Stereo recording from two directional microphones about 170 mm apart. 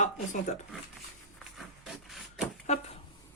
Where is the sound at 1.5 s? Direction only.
Centre (ahead or behind).